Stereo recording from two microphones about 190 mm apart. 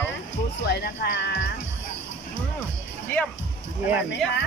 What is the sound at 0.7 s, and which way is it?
Speech, 70° left (ahead or behind).